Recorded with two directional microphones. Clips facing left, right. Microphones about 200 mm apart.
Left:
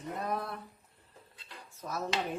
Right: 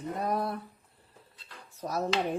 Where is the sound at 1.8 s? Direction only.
35° right (ahead or behind).